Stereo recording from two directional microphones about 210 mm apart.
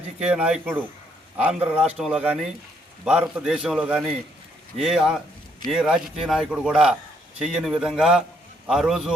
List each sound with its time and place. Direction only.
0.2 s speech: 5° right (ahead or behind)